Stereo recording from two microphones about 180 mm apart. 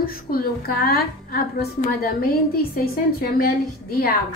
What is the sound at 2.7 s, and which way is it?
A woman's voice, 55° left (ahead or behind).